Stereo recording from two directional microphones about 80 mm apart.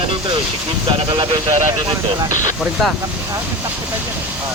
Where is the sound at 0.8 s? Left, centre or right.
Right.